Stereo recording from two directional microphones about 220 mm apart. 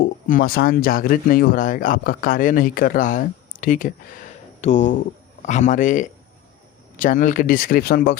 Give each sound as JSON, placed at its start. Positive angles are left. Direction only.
{"t": 0.0, "sound": "speech", "side_deg": 40}